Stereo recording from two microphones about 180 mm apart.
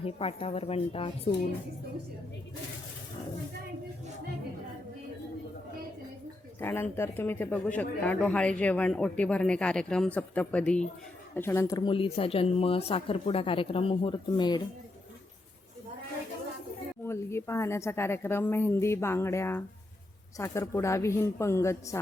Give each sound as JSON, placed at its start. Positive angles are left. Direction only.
{"t": 0.0, "sound": "a woman's voice", "side_deg": 30}
{"t": 6.6, "sound": "a man's voice", "side_deg": 10}
{"t": 17.0, "sound": "a man's voice", "side_deg": 15}